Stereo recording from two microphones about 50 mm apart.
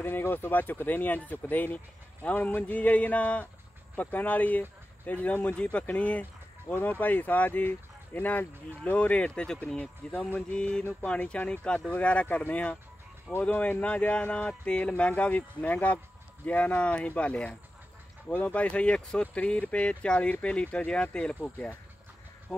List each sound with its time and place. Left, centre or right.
0.0 s speech: left; by 21.4 s centre